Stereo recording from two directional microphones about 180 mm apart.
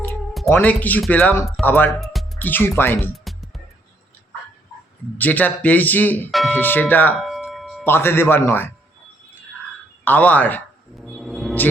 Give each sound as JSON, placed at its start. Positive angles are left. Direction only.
{"t": 0.1, "sound": "music", "side_deg": 0}
{"t": 0.5, "sound": "speech", "side_deg": 10}
{"t": 2.0, "sound": "music", "side_deg": 0}
{"t": 2.5, "sound": "speech", "side_deg": 10}
{"t": 5.1, "sound": "speech", "side_deg": 10}
{"t": 7.2, "sound": "a sound", "side_deg": 0}
{"t": 7.9, "sound": "speech", "side_deg": 10}
{"t": 10.0, "sound": "a man's voice", "side_deg": 10}